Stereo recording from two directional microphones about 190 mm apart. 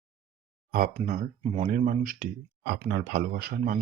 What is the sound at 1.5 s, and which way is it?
Speech, 30° right (ahead or behind).